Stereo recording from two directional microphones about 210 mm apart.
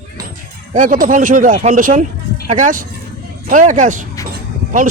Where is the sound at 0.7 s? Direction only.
40° right (ahead or behind).